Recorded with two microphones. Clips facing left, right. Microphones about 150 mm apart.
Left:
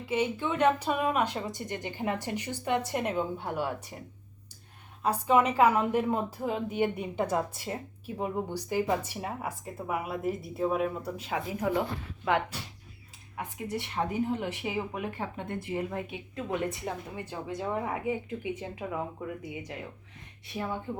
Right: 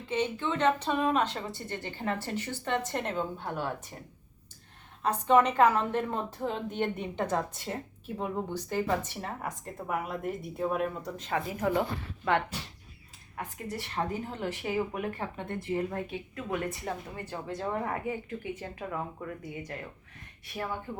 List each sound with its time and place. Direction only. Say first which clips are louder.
0.0 s a woman's voice: left 1 dB; 10° left (ahead or behind)
5.0 s a woman's voice: right 1 dB; 10° left (ahead or behind)